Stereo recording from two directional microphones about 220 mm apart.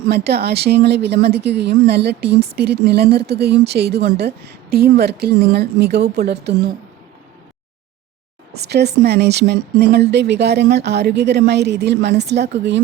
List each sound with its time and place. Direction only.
0.1 s speech: 45° right (ahead or behind)
8.5 s speech: 50° right (ahead or behind)